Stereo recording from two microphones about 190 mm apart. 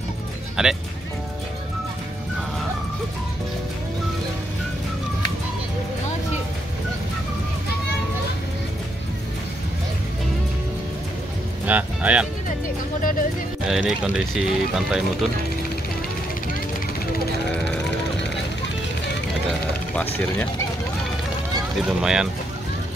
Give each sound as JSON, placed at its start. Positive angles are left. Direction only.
{"t": 0.6, "sound": "speech", "side_deg": -5}
{"t": 11.6, "sound": "speech", "side_deg": -10}
{"t": 13.0, "sound": "speech", "side_deg": 45}
{"t": 13.7, "sound": "speech", "side_deg": 0}
{"t": 21.8, "sound": "speech", "side_deg": -5}